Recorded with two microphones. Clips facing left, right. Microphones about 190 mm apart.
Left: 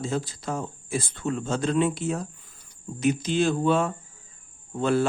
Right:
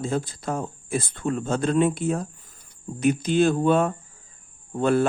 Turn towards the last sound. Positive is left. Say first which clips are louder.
# right 2 dB
turn(degrees=-55)  # may be behind; listen again after turning